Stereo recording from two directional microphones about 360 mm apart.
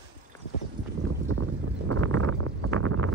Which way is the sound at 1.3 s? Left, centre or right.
Right.